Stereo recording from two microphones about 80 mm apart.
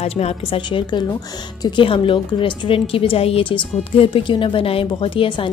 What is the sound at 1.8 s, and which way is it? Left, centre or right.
Speech, left.